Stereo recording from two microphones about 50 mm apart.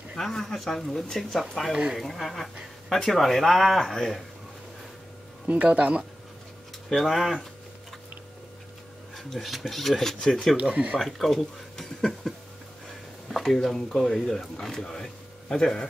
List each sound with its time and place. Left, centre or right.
0.1 s speech: centre
5.5 s speech: right
6.9 s speech: centre
9.1 s speech: centre
10.6 s speech: right
11.0 s speech: centre